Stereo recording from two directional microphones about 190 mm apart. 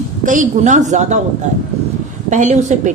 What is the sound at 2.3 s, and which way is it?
Speech, 40° right (ahead or behind).